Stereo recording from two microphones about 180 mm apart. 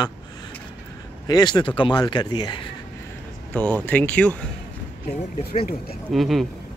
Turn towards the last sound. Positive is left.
turn(degrees=0)  # may be behind; listen again after turning